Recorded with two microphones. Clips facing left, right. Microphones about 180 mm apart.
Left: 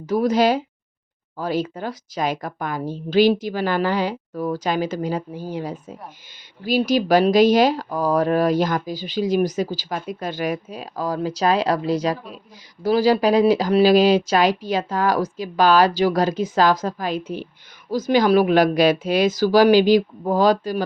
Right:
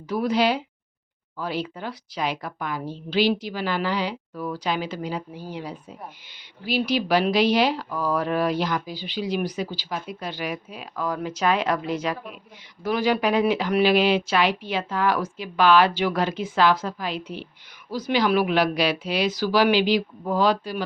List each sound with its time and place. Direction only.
0.1 s a woman's voice: 45° left (ahead or behind)